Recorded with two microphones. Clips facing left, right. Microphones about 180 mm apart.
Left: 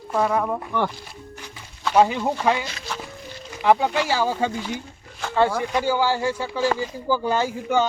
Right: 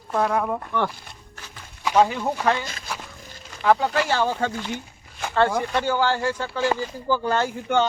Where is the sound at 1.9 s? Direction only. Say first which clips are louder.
Left 1 dB; 10° left (ahead or behind).